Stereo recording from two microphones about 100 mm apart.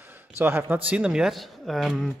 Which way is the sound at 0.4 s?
20° right (ahead or behind).